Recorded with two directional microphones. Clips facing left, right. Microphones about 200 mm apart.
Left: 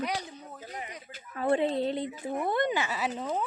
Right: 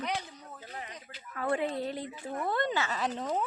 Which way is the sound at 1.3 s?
25° left (ahead or behind).